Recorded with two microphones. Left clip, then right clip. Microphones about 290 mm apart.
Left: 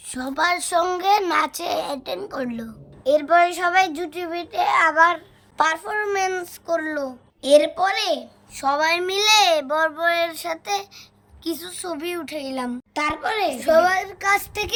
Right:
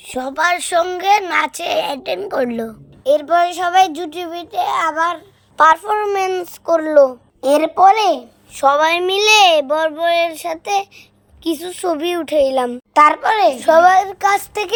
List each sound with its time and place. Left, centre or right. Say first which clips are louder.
0.0 s speech: right 5 dB; centre
3.0 s child singing: right 3 dB; right
5.5 s speech: right 9 dB; centre